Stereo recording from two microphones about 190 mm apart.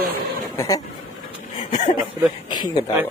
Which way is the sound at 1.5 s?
40° left (ahead or behind).